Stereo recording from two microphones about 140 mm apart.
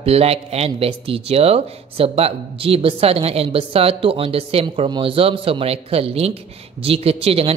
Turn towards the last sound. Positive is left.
turn(degrees=-45)  # may be behind; listen again after turning